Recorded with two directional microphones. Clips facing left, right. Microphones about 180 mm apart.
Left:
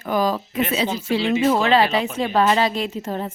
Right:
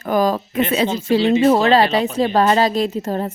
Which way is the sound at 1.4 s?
40° right (ahead or behind).